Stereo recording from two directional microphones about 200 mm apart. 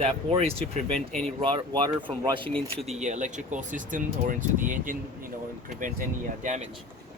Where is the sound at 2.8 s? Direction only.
35° right (ahead or behind).